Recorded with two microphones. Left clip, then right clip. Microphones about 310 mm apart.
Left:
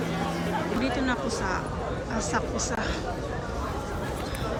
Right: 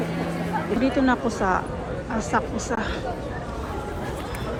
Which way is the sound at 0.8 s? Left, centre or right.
Centre.